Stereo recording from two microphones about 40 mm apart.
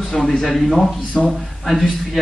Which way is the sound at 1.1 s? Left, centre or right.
Centre.